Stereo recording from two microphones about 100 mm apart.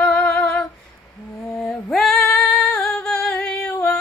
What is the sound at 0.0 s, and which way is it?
Female singing, 15° left (ahead or behind).